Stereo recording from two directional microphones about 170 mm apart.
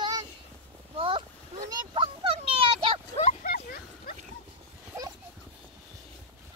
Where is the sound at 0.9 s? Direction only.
30° right (ahead or behind).